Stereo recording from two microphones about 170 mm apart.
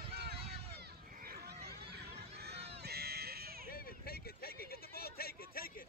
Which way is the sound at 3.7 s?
60° left (ahead or behind).